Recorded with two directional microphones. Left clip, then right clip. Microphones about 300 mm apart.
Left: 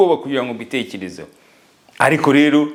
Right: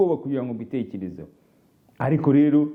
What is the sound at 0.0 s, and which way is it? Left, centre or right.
A man's voice, centre.